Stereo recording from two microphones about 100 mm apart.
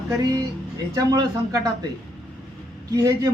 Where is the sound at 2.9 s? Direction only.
35° right (ahead or behind).